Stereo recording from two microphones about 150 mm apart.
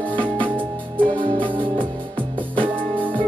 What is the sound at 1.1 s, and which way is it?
Music, 35° right (ahead or behind).